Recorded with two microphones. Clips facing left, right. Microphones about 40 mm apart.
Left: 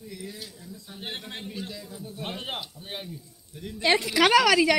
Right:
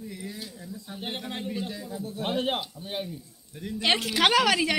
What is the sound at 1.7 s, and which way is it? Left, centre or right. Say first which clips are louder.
Speech: right 4 dB; right.